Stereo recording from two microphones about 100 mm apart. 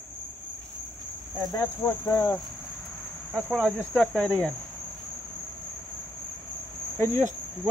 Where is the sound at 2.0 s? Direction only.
30° left (ahead or behind).